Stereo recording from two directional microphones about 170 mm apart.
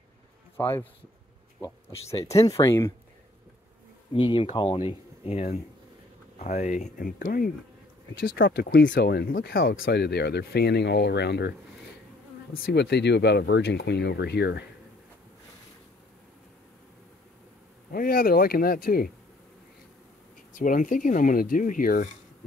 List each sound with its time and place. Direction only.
0.6 s speech: 15° left (ahead or behind)
2.3 s speech: 20° left (ahead or behind)
4.1 s speech: 30° left (ahead or behind); by 7.5 s 55° left (ahead or behind)
8.1 s speech: 75° left (ahead or behind)
12.5 s speech: 70° left (ahead or behind)
17.9 s speech: 55° left (ahead or behind)
20.5 s speech: 50° left (ahead or behind)